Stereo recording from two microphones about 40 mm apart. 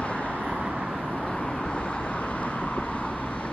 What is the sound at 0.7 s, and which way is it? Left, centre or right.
Vehicle, right.